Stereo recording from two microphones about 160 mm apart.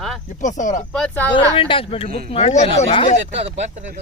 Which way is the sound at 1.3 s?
35° left (ahead or behind).